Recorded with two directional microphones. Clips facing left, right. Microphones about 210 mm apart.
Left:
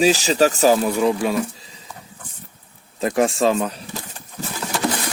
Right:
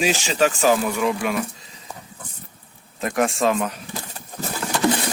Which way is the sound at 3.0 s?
30° left (ahead or behind).